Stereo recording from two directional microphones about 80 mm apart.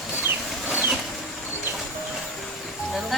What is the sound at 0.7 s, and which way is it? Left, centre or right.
Vehicle, centre.